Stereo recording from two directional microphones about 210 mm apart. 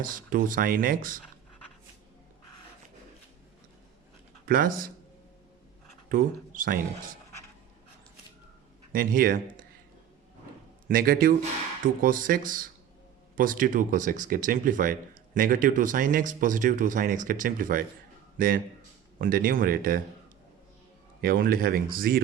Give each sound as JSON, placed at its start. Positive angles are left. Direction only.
{"t": 0.0, "sound": "speech", "side_deg": -40}
{"t": 4.4, "sound": "speech", "side_deg": -40}
{"t": 6.1, "sound": "speech", "side_deg": -40}
{"t": 8.9, "sound": "speech", "side_deg": -40}
{"t": 10.8, "sound": "speech", "side_deg": -45}
{"t": 21.2, "sound": "speech", "side_deg": -45}